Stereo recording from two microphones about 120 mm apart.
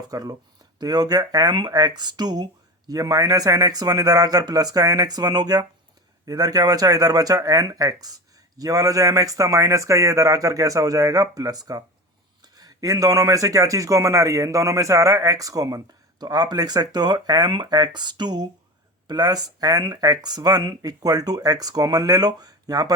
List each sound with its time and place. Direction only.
0.1 s speech: 30° right (ahead or behind)